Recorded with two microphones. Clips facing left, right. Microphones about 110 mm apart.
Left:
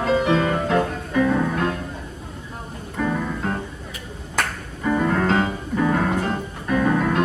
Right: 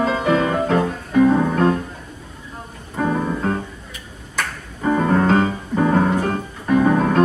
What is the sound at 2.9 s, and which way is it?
Music, 35° right (ahead or behind).